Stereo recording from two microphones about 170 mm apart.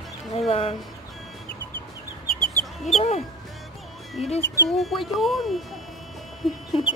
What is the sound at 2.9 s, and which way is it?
Music, 35° left (ahead or behind).